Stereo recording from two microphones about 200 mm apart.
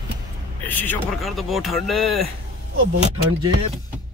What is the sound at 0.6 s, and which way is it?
Speech, 10° left (ahead or behind).